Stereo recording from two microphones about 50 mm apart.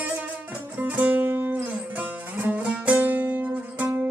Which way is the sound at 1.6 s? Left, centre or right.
Right.